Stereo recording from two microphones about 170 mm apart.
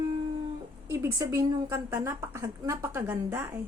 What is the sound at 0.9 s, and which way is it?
A woman's voice, 15° right (ahead or behind).